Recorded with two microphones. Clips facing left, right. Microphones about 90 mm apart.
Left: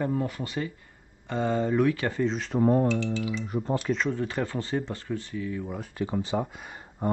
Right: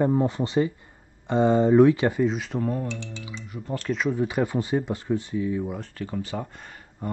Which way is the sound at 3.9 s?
10° right (ahead or behind).